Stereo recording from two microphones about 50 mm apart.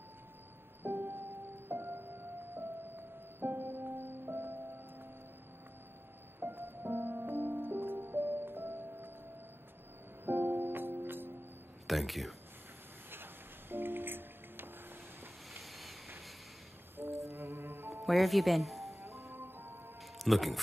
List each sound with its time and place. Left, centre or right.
0.8 s music: right
6.4 s music: right
10.2 s music: right
11.9 s speech: centre
13.1 s music: right
15.5 s boat: centre
17.3 s music: right
18.0 s speech: centre
18.9 s music: right
19.3 s music: right
20.2 s speech: centre